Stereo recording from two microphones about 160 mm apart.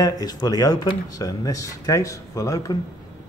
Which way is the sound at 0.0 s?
25° left (ahead or behind).